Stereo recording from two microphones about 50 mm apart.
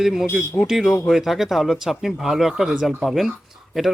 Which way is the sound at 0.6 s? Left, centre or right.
Left.